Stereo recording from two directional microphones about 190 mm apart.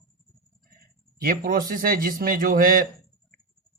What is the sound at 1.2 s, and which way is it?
Speech, 50° right (ahead or behind).